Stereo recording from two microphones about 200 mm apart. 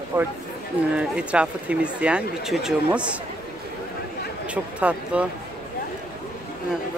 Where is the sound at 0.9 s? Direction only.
5° right (ahead or behind).